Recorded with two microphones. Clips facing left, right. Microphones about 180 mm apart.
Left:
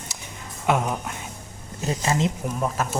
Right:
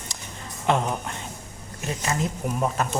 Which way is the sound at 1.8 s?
30° left (ahead or behind).